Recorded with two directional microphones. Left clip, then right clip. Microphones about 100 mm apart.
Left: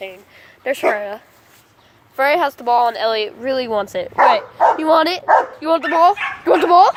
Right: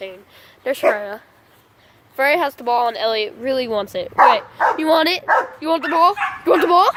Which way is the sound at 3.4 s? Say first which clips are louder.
Left 1 dB; 15° right (ahead or behind).